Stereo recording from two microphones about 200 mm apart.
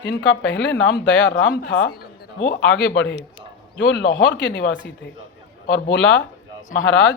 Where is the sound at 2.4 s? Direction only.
65° left (ahead or behind).